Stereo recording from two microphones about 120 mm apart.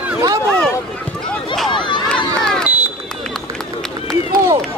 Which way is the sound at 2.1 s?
5° left (ahead or behind).